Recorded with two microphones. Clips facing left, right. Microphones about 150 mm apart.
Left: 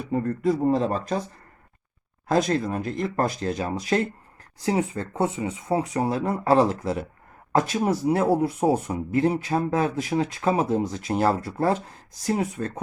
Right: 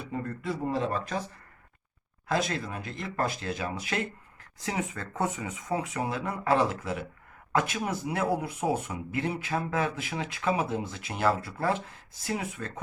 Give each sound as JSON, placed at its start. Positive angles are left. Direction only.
{"t": 0.1, "sound": "speech", "side_deg": 40}
{"t": 2.2, "sound": "speech", "side_deg": 40}